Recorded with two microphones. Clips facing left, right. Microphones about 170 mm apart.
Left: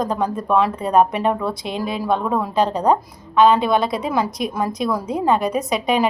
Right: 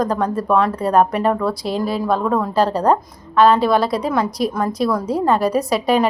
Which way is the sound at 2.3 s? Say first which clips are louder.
Right 2 dB; 5° left (ahead or behind).